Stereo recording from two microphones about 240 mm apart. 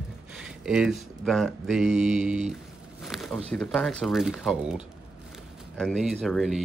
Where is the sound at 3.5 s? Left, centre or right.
Centre.